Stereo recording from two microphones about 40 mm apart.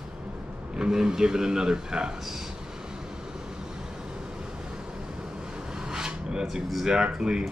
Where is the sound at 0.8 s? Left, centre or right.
Centre.